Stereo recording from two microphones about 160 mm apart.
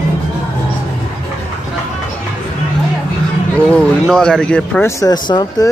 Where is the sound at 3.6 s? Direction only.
5° left (ahead or behind).